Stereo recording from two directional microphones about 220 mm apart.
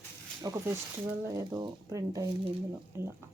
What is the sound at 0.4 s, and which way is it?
Speech, 15° right (ahead or behind).